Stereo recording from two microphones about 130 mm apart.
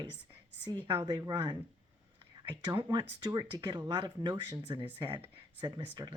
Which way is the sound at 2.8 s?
35° right (ahead or behind).